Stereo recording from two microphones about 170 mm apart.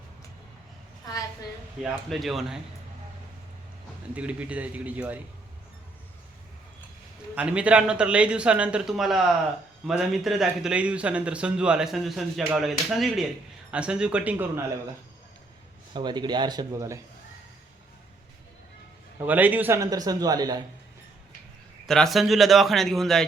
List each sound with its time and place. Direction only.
1.8 s speech: centre (ahead or behind)
4.1 s speech: 10° right (ahead or behind)
7.3 s speech: 5° right (ahead or behind)
15.9 s a man's voice: 25° right (ahead or behind)
19.2 s a man's voice: 10° right (ahead or behind)
21.8 s speech: centre (ahead or behind)